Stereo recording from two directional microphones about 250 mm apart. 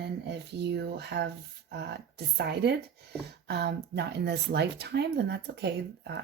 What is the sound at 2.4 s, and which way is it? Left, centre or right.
Speech, right.